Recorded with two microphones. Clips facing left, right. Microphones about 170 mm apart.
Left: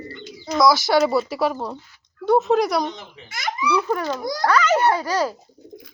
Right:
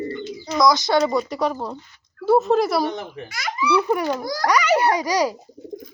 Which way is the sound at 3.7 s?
15° right (ahead or behind).